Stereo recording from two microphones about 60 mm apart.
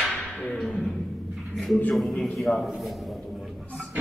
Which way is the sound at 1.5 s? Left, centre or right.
Centre.